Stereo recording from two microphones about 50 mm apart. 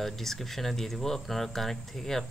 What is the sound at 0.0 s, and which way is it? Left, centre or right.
Speech, centre.